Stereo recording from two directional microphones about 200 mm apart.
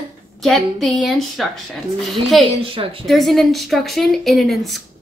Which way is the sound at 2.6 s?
25° right (ahead or behind).